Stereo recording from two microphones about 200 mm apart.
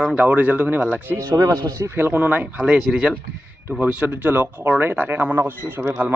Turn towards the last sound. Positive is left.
turn(degrees=-10)  # may be behind; listen again after turning